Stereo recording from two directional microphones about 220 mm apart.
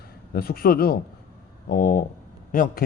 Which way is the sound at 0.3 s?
45° left (ahead or behind).